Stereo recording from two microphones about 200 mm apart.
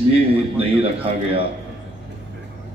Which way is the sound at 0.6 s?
30° right (ahead or behind).